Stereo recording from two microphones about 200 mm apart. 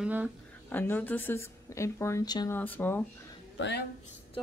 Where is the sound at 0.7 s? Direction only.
10° left (ahead or behind).